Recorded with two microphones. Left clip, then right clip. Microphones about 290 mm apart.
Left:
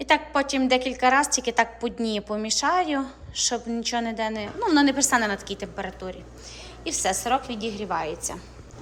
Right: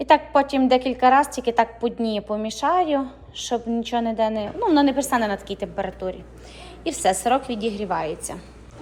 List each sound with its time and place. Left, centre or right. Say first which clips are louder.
0.0 s a woman's voice: right 5 dB; centre